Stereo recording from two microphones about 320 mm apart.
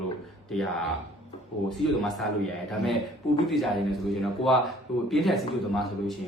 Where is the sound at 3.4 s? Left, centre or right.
Centre.